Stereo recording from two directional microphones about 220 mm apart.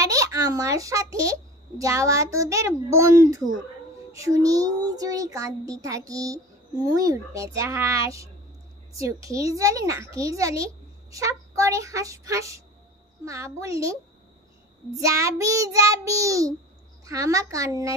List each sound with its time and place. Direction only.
0.0 s a child's voice: 15° right (ahead or behind)
15.0 s a child's voice: 15° right (ahead or behind)